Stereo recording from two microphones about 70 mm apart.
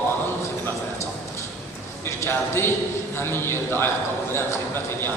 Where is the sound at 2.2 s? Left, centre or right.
Left.